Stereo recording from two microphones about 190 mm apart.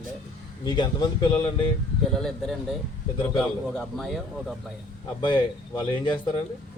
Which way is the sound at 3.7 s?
Centre (ahead or behind).